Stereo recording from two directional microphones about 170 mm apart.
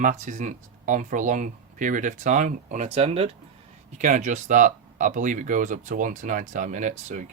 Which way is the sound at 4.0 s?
45° right (ahead or behind).